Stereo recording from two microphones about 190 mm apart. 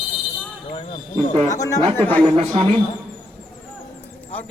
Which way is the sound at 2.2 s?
30° right (ahead or behind).